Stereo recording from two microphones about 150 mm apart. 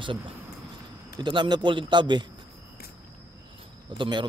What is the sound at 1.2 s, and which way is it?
A man's voice, 30° right (ahead or behind).